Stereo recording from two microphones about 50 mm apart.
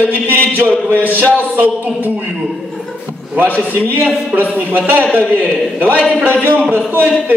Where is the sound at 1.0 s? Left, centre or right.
Left.